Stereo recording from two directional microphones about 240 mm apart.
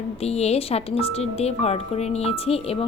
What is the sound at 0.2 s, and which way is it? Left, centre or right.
A woman's voice, left.